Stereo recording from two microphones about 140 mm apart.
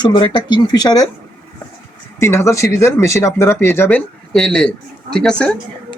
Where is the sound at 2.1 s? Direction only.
20° left (ahead or behind).